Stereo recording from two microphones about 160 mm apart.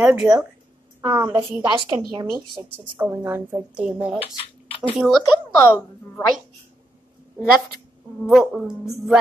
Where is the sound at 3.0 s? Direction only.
10° right (ahead or behind).